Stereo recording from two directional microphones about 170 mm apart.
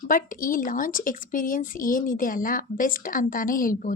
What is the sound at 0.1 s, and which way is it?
A woman's voice, 55° left (ahead or behind).